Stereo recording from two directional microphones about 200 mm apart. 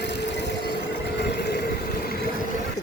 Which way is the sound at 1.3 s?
55° left (ahead or behind).